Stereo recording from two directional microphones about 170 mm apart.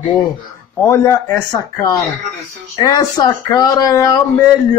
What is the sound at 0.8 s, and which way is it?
Speech, 15° left (ahead or behind).